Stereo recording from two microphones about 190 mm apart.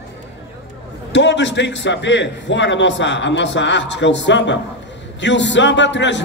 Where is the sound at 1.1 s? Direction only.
70° left (ahead or behind).